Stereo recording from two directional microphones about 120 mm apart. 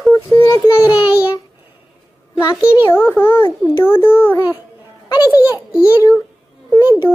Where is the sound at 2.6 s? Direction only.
10° right (ahead or behind).